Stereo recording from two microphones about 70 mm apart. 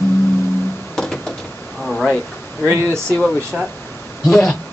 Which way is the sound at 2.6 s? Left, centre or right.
Right.